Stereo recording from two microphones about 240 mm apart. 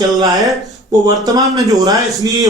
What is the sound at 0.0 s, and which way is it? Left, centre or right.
A man's voice, centre.